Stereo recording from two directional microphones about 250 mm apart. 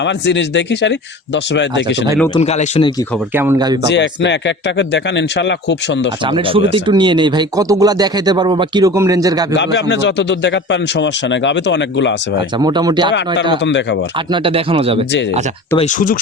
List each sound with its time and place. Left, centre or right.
0.0 s speech: left
2.3 s speech: left
3.3 s speech: centre
3.8 s speech: left
6.2 s speech: right
9.9 s speech: left
12.5 s speech: centre
13.7 s speech: left
14.3 s speech: right
15.8 s speech: left